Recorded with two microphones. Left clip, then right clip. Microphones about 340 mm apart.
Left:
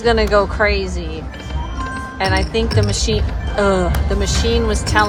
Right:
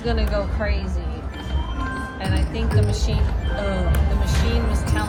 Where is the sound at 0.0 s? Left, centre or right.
Centre.